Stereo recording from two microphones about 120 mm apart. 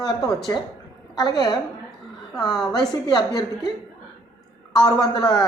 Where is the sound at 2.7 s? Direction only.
35° left (ahead or behind).